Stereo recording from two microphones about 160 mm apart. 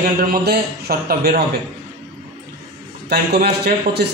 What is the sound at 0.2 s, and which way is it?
A man's voice, 75° right (ahead or behind).